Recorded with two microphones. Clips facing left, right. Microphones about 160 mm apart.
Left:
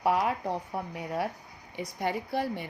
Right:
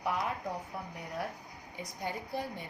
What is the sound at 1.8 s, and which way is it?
Speech, 75° left (ahead or behind).